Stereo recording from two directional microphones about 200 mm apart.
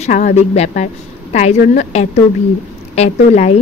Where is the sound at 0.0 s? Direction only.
35° left (ahead or behind).